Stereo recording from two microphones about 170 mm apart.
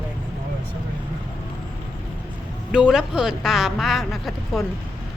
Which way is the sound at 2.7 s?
5° right (ahead or behind).